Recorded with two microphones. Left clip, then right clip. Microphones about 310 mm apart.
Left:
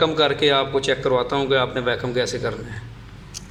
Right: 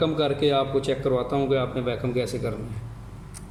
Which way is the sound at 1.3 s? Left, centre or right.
Left.